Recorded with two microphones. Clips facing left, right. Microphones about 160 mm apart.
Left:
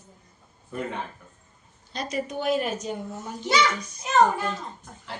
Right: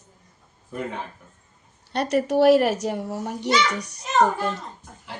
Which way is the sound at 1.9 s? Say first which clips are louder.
Right 9 dB; 70° right (ahead or behind).